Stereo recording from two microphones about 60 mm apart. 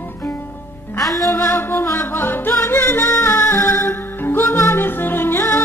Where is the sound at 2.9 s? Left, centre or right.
Left.